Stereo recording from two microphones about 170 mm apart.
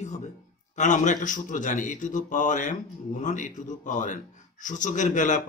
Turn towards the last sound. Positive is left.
turn(degrees=45)  # may be behind; listen again after turning